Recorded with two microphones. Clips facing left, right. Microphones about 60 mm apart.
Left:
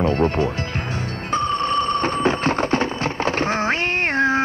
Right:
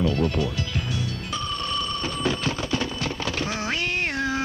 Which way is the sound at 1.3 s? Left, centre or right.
Left.